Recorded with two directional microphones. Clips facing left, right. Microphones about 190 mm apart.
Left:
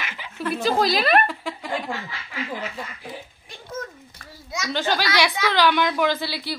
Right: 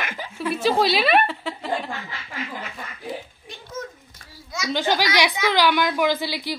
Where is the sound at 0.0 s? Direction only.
50° right (ahead or behind).